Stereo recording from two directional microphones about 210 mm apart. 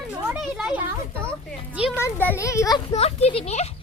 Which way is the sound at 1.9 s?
10° left (ahead or behind).